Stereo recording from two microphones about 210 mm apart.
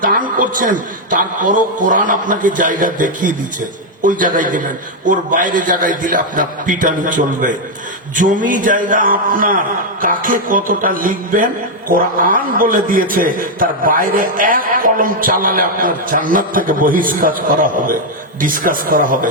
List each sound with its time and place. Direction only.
0.0 s a man's voice: 40° right (ahead or behind)